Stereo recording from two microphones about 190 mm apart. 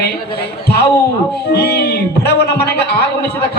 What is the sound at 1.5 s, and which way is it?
A man's voice, 60° left (ahead or behind).